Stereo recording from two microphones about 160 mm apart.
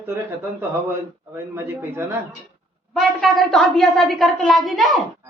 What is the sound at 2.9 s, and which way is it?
A woman's voice, centre (ahead or behind).